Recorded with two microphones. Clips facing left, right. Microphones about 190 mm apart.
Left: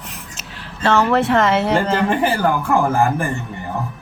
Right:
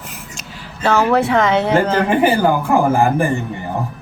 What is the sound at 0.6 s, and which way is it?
Speech, centre (ahead or behind).